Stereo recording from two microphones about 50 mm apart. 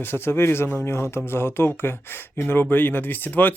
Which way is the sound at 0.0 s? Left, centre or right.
Left.